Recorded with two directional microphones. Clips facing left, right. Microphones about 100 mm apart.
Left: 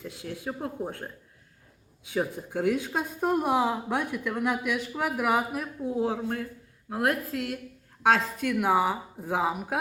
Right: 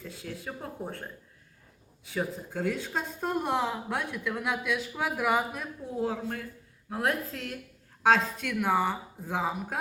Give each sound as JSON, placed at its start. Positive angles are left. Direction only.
{"t": 0.0, "sound": "speech", "side_deg": 15}
{"t": 2.1, "sound": "speech", "side_deg": 15}
{"t": 8.0, "sound": "speech", "side_deg": 5}